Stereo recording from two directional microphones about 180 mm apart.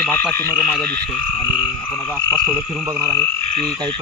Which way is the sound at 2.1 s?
10° right (ahead or behind).